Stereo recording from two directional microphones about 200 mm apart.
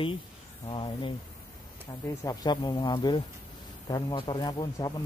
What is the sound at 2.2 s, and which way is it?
Speech, 20° left (ahead or behind).